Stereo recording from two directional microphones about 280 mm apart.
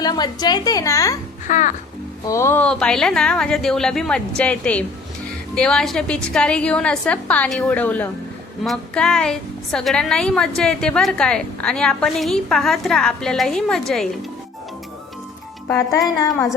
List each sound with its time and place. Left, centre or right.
0.0 s a woman's voice: centre
1.5 s music: left
2.2 s a woman's voice: centre
15.7 s a woman's voice: centre